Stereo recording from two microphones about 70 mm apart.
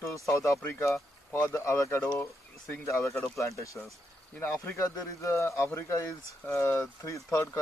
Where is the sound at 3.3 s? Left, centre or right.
Left.